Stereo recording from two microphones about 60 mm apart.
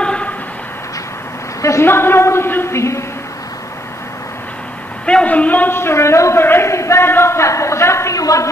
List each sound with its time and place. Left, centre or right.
0.0 s vehicle: centre
1.6 s a sound: left
1.9 s speech: left
5.0 s a woman's voice: left
5.8 s speech: left
6.4 s speech: left
8.2 s speech: left